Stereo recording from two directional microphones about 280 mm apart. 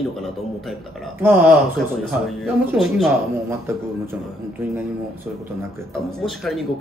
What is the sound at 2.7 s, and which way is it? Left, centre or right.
Speech, centre.